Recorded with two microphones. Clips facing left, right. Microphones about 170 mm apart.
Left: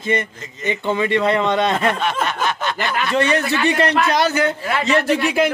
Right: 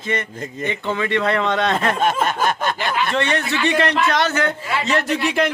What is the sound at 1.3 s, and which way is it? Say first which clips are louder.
Speech: left 2 dB; centre (ahead or behind).